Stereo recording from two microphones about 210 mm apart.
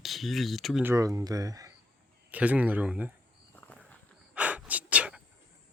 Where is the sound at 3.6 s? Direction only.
5° left (ahead or behind).